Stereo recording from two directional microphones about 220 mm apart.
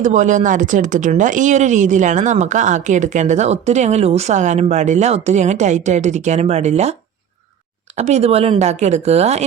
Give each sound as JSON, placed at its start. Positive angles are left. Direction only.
{"t": 0.0, "sound": "speech", "side_deg": -35}
{"t": 7.9, "sound": "speech", "side_deg": -30}